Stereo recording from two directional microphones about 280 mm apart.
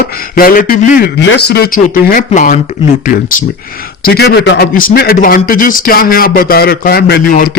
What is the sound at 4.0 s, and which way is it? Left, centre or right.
A man's voice, left.